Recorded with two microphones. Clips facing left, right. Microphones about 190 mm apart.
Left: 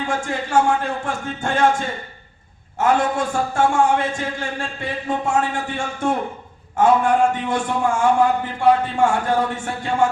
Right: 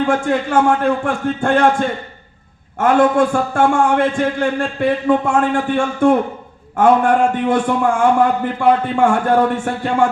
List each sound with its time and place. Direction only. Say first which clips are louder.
0.0 s a man's voice: right 8 dB; 55° right (ahead or behind)